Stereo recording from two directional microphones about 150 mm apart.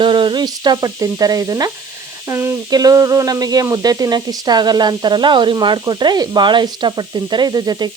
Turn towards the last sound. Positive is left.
turn(degrees=-30)  # may be behind; listen again after turning